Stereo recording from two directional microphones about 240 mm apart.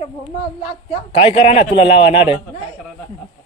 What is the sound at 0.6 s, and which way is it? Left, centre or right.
A man's voice, left.